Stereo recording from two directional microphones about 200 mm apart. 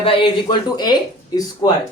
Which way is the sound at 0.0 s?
25° left (ahead or behind).